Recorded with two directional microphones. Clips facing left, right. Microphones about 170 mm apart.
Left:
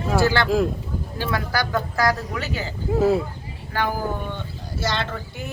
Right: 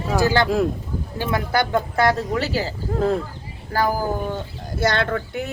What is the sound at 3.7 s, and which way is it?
Speech, 35° right (ahead or behind).